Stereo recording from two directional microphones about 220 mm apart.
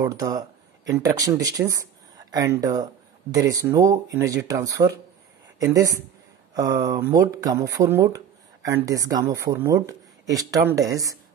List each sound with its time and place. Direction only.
0.0 s speech: 15° right (ahead or behind)